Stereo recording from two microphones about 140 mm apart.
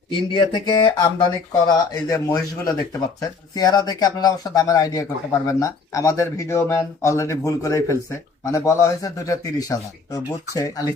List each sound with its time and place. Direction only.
0.1 s speech: 35° left (ahead or behind)